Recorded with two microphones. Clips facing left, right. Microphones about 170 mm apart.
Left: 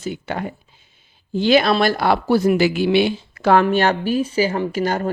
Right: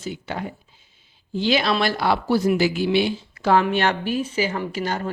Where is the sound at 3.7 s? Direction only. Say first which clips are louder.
Left 4 dB; 40° left (ahead or behind).